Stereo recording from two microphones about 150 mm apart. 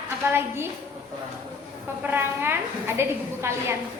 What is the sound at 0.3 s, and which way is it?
Speech, 15° right (ahead or behind).